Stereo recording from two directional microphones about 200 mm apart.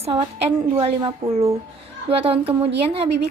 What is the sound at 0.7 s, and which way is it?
Speech, 30° right (ahead or behind).